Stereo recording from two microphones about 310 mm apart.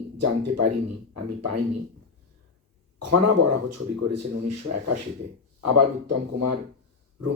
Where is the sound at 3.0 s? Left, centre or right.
Right.